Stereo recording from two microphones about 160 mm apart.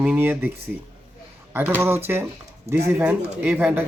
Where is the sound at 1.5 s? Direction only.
10° right (ahead or behind).